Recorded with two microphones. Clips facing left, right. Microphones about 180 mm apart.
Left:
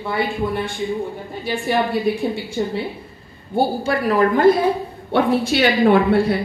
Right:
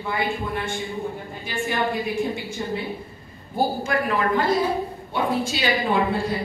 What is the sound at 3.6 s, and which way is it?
Speech, 35° left (ahead or behind).